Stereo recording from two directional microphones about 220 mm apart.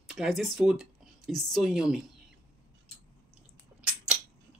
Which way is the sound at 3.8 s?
5° right (ahead or behind).